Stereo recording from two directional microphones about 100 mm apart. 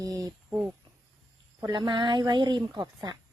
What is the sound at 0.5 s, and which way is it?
Cricket, 15° right (ahead or behind).